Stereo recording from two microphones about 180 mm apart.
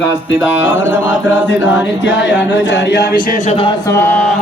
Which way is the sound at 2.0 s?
90° left.